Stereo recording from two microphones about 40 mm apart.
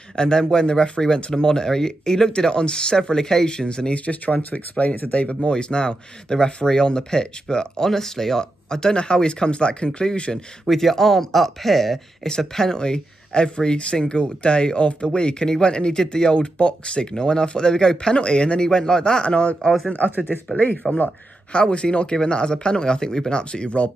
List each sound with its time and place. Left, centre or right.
0.1 s speech: centre
4.0 s speech: left
5.2 s speech: left
10.7 s speech: centre
19.2 s speech: left
20.5 s speech: left
21.5 s speech: left